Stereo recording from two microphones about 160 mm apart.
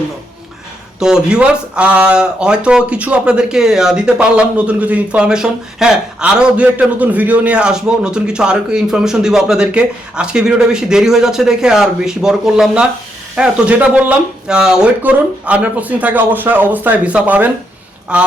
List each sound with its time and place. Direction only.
0.9 s speech: 5° right (ahead or behind)